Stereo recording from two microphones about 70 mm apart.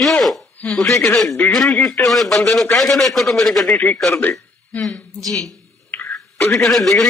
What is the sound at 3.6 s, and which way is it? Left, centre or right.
Speech, centre.